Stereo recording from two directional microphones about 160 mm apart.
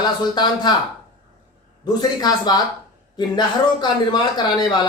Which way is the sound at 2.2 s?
25° left (ahead or behind).